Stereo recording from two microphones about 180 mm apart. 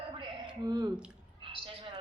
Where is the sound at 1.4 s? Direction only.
30° right (ahead or behind).